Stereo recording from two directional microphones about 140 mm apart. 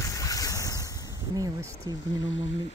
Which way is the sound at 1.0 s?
25° right (ahead or behind).